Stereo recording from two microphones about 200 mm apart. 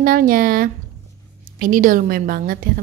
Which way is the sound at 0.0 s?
45° right (ahead or behind).